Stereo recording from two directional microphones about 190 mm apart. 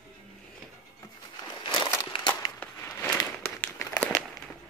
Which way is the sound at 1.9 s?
20° left (ahead or behind).